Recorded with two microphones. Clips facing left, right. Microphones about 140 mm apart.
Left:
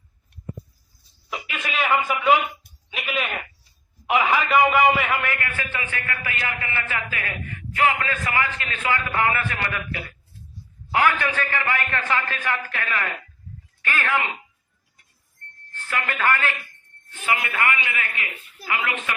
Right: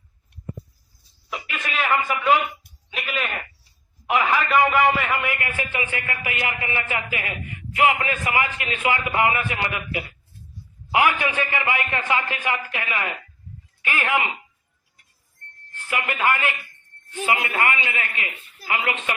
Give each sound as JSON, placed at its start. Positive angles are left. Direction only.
{"t": 1.3, "sound": "a sound", "side_deg": 5}
{"t": 5.2, "sound": "a man's voice", "side_deg": -15}
{"t": 15.7, "sound": "a man's voice", "side_deg": -15}